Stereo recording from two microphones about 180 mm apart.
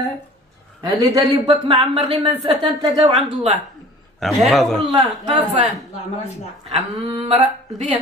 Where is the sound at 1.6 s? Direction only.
30° right (ahead or behind).